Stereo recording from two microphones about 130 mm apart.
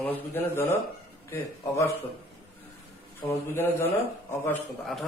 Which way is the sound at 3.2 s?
20° left (ahead or behind).